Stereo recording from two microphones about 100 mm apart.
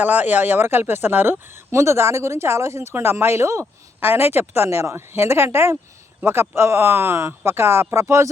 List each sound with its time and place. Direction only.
0.0 s speech: 20° right (ahead or behind)